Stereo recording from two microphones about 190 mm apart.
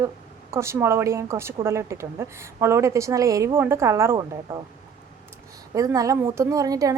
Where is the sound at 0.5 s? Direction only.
15° right (ahead or behind).